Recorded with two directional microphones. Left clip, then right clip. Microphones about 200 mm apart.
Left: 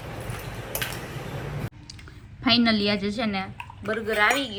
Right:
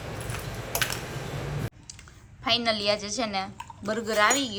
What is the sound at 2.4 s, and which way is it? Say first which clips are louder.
A woman's voice: left 3 dB; 10° right (ahead or behind).